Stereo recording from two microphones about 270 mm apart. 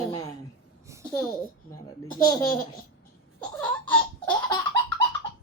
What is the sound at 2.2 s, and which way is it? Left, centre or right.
Speech, centre.